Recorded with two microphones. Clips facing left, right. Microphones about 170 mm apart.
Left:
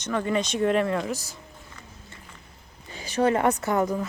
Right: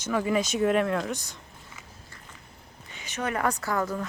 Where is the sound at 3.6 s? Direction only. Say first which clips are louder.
Left 4 dB; 20° left (ahead or behind).